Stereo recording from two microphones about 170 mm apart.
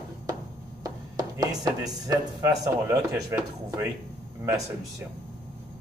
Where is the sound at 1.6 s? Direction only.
20° right (ahead or behind).